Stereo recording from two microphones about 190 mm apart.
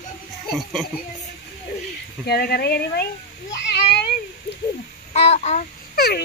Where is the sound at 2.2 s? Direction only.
55° left (ahead or behind).